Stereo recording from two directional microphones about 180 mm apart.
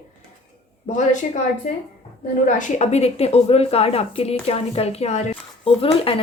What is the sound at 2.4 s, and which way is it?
A woman's voice, 45° left (ahead or behind).